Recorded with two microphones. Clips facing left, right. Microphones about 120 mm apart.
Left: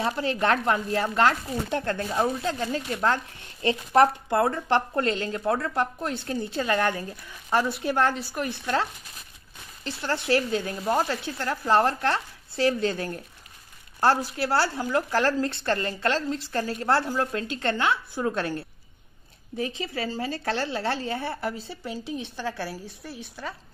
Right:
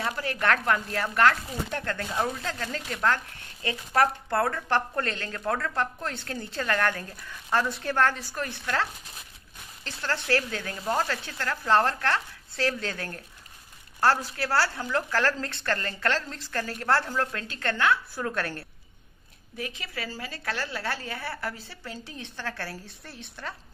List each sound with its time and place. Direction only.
0.0 s a woman's voice: 25° left (ahead or behind)
9.8 s a woman's voice: 15° left (ahead or behind)
19.5 s a woman's voice: 30° left (ahead or behind); by 23.5 s 10° left (ahead or behind)